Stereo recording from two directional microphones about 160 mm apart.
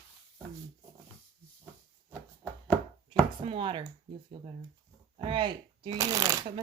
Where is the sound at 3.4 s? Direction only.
35° right (ahead or behind).